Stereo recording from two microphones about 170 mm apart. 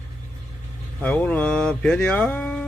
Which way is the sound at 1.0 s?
10° left (ahead or behind).